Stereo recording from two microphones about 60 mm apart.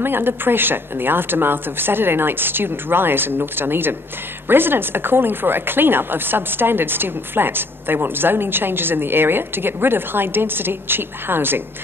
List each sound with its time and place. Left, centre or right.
0.0 s speech: right